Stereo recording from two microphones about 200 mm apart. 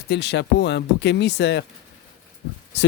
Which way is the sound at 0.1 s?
60° left (ahead or behind).